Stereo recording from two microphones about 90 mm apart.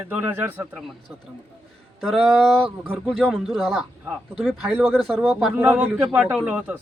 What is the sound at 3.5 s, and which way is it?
Speech, centre (ahead or behind).